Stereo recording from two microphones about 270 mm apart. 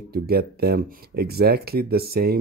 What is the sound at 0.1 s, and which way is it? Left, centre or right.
Speech, right.